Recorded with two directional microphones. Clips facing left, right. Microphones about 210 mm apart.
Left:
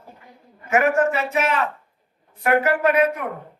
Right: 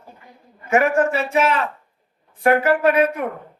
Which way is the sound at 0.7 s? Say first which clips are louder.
Right 1 dB; 30° right (ahead or behind).